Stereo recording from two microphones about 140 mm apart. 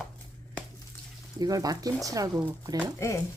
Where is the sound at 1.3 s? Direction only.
25° right (ahead or behind).